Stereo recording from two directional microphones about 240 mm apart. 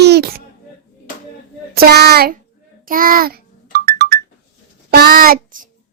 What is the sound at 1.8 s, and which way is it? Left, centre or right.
A child's voice, right.